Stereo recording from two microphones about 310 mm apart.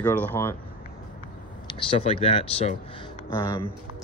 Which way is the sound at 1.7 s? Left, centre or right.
Centre.